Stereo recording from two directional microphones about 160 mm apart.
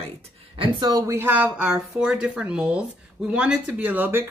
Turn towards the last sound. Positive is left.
turn(degrees=-10)  # may be behind; listen again after turning